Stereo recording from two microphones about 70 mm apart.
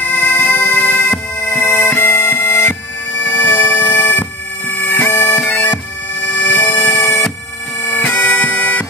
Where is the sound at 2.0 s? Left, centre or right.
Left.